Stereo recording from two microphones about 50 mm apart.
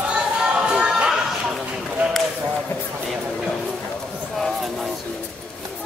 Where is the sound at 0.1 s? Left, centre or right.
Centre.